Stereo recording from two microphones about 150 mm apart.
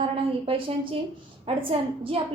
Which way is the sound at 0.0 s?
35° right (ahead or behind).